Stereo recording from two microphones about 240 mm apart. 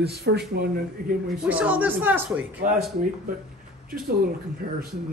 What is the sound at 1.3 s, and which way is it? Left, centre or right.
A woman's voice, centre.